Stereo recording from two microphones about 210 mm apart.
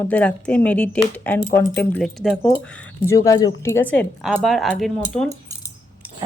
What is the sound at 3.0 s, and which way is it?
Speech, 15° left (ahead or behind).